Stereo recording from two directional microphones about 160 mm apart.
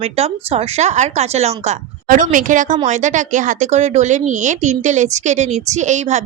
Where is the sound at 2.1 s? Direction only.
55° right (ahead or behind).